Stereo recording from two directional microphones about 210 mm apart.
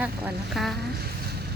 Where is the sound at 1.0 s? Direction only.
50° right (ahead or behind).